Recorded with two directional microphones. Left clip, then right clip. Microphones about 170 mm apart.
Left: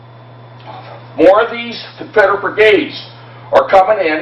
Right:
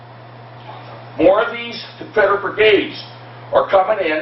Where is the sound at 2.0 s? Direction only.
35° left (ahead or behind).